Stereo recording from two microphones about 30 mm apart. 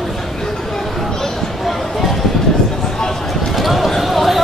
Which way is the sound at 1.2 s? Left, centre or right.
Centre.